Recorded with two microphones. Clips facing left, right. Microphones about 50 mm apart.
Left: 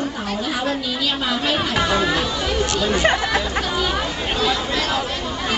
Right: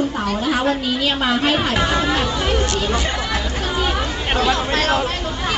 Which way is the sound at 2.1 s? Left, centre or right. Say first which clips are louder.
Right 2 dB; right.